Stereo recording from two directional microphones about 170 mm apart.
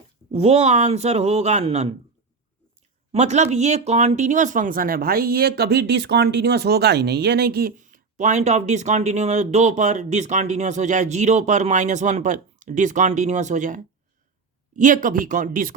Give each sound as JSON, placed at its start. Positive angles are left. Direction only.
{"t": 0.3, "sound": "speech", "side_deg": -40}
{"t": 3.1, "sound": "speech", "side_deg": -40}